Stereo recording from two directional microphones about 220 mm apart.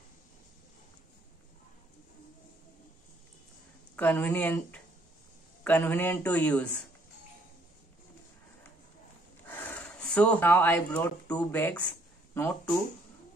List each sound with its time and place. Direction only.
3.9 s a man's voice: 10° left (ahead or behind)
9.5 s a man's voice: 5° left (ahead or behind)